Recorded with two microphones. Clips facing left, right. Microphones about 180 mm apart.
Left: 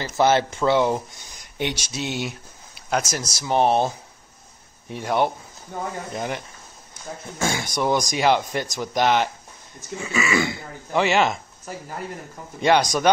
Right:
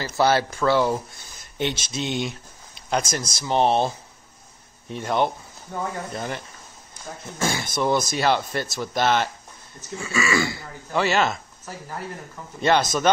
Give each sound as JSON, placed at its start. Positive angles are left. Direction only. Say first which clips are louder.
{"t": 0.0, "sound": "speech", "louder": "left 1 dB", "side_deg": 20}
{"t": 12.5, "sound": "speech", "louder": "left 2 dB", "side_deg": 15}